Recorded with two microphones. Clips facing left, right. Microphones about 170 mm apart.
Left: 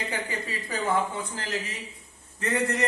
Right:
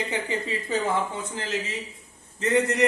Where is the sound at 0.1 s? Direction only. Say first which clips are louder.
Right 4 dB; 25° right (ahead or behind).